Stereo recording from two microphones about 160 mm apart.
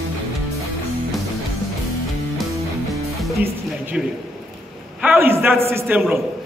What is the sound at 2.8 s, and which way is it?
Music, centre (ahead or behind).